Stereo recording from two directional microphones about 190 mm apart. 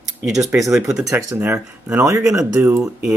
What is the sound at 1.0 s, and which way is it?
Speech, 15° right (ahead or behind).